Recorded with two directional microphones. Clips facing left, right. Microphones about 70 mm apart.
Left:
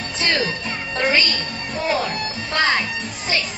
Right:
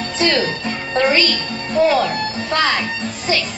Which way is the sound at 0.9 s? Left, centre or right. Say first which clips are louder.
Right 4 dB; right.